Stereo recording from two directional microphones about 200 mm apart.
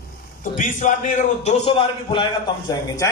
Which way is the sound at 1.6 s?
25° left (ahead or behind).